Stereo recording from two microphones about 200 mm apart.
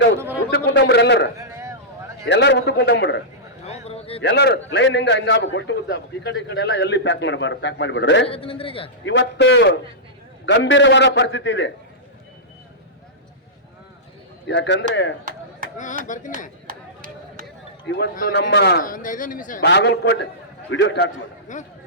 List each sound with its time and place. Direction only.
0.5 s a sound: 60° left (ahead or behind)
1.4 s a sound: 15° right (ahead or behind)
2.2 s a man's voice: 60° left (ahead or behind)
3.7 s a sound: 30° left (ahead or behind)
4.2 s a man's voice: 55° left (ahead or behind)
8.3 s a man's voice: 25° left (ahead or behind)
9.0 s a man's voice: 60° left (ahead or behind)
14.4 s a man's voice: 60° left (ahead or behind)
15.2 s chop: 40° right (ahead or behind)
16.0 s chopping: 40° left (ahead or behind)
16.6 s chop: 45° right (ahead or behind)
17.8 s a man's voice: 55° left (ahead or behind)
19.6 s a man's voice: 60° left (ahead or behind)
21.4 s speech: 40° left (ahead or behind)